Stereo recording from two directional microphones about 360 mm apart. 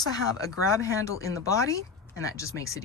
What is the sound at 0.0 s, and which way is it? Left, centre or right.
Speech, centre.